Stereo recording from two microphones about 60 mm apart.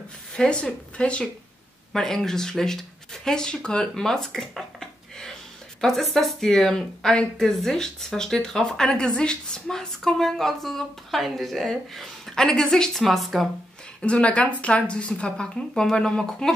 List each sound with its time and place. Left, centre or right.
0.4 s speech: centre
1.9 s speech: centre
14.0 s speech: centre